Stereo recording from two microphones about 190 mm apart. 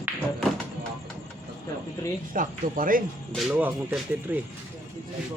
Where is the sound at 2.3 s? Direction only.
45° right (ahead or behind).